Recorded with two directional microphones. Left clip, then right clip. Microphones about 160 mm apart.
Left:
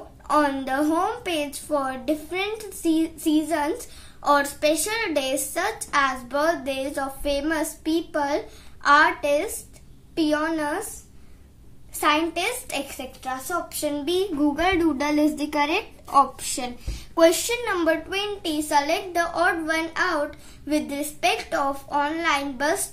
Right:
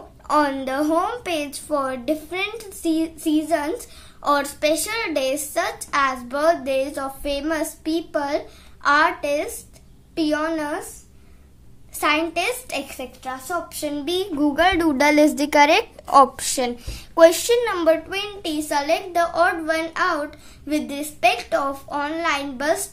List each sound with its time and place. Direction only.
0.3 s a woman's voice: 25° right (ahead or behind)
12.0 s a woman's voice: 20° right (ahead or behind)